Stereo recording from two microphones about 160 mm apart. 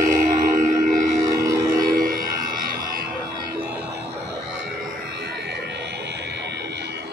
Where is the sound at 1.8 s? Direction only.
60° right (ahead or behind).